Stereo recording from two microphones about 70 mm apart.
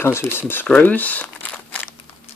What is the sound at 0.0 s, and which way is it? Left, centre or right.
Speech, left.